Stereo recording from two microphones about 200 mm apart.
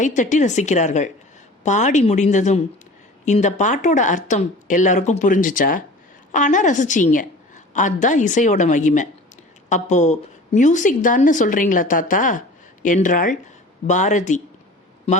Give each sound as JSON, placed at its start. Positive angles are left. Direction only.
{"t": 0.0, "sound": "a woman's voice", "side_deg": 40}